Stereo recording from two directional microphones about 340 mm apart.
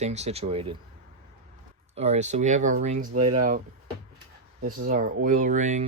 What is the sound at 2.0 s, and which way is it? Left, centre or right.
Speech, centre.